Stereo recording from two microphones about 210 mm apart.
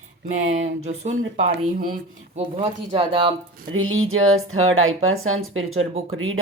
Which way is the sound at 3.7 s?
75° right (ahead or behind).